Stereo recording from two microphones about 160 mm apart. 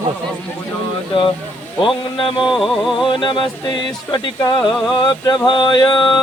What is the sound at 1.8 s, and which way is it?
Speech, 30° left (ahead or behind).